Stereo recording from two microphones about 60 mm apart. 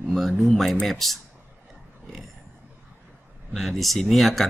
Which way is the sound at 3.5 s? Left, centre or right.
Centre.